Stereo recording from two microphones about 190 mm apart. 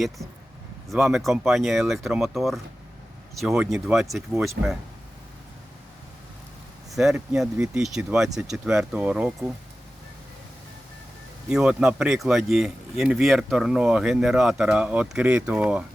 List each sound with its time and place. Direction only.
0.9 s speech: centre (ahead or behind)
6.9 s speech: centre (ahead or behind)
11.4 s speech: 5° right (ahead or behind)